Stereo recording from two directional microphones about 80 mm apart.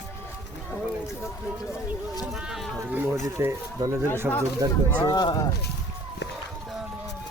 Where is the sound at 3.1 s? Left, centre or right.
Right.